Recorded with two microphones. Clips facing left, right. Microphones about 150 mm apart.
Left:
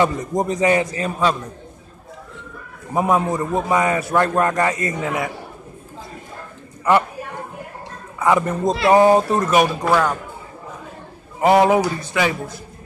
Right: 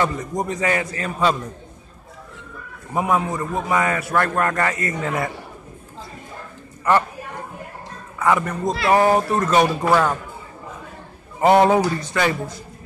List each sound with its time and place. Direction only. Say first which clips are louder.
0.0 s a man's voice: left 4 dB; 20° left (ahead or behind)
2.9 s a man's voice: left 3 dB; 20° left (ahead or behind)
5.0 s a man's voice: even; centre (ahead or behind)
6.8 s a man's voice: left 2 dB; 15° left (ahead or behind)
8.2 s a man's voice: left 2 dB; 20° left (ahead or behind)
11.4 s a man's voice: even; 5° left (ahead or behind)